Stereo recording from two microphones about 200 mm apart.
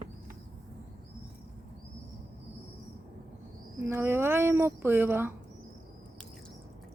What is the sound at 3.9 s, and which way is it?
A woman's voice, 10° right (ahead or behind).